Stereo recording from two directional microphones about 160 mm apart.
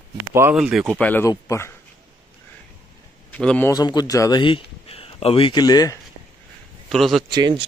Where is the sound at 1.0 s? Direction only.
10° left (ahead or behind).